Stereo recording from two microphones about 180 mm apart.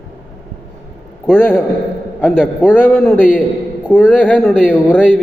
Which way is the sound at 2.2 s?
5° right (ahead or behind).